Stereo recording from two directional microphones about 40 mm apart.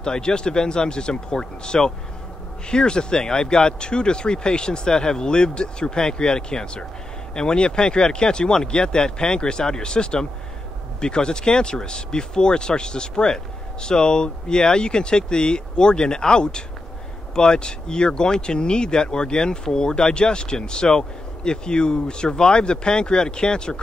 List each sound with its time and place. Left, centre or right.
0.0 s speech: centre